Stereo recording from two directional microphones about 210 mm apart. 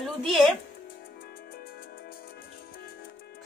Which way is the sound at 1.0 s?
45° left (ahead or behind).